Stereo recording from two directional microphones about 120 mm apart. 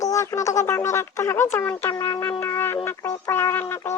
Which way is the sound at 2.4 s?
20° left (ahead or behind).